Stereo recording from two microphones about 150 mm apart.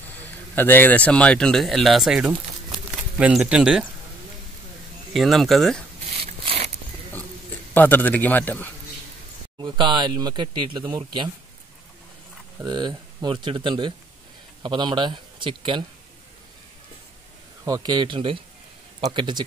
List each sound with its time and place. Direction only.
0.2 s speech: 15° left (ahead or behind); by 3.9 s 5° right (ahead or behind)
5.1 s speech: centre (ahead or behind)
6.1 s a sound: 40° right (ahead or behind)
7.7 s speech: 10° left (ahead or behind)
9.6 s speech: 30° right (ahead or behind)
12.6 s speech: 30° right (ahead or behind)
17.6 s speech: 25° right (ahead or behind)